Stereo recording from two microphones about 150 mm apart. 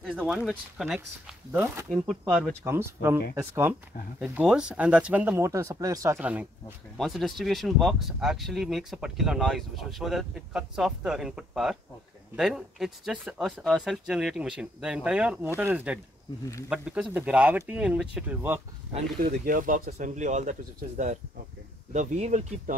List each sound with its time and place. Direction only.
0.0 s speech: 5° right (ahead or behind)
1.5 s speech: 15° right (ahead or behind)
1.9 s speech: centre (ahead or behind)
2.6 s speech: 15° right (ahead or behind)
7.0 s speech: centre (ahead or behind)
19.4 s speech: 65° right (ahead or behind)
19.9 s speech: 55° right (ahead or behind)
21.9 s speech: 50° right (ahead or behind)